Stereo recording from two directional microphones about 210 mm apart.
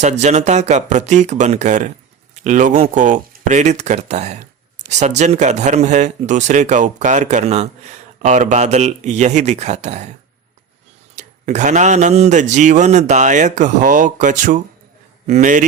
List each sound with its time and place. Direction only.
0.0 s speech: 35° right (ahead or behind)